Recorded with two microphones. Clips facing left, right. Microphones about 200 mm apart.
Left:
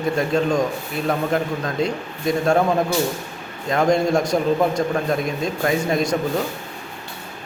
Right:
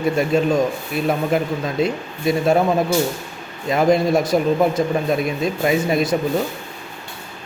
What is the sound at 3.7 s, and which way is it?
A man's voice, 5° right (ahead or behind).